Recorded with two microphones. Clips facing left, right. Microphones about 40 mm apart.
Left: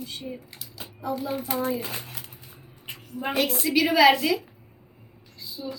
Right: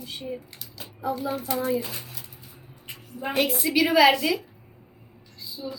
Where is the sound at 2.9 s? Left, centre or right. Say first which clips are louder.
Left 1 dB; centre.